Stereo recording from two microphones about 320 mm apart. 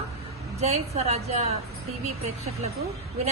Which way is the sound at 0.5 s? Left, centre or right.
Centre.